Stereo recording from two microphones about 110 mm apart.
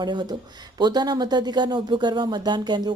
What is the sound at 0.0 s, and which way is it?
Speech, 40° right (ahead or behind).